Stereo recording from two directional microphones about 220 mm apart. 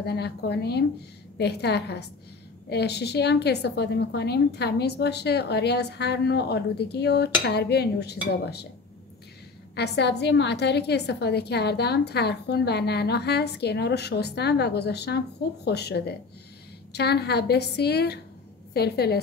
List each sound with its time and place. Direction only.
0.0 s a woman's voice: 50° left (ahead or behind)
9.8 s a woman's voice: 50° left (ahead or behind)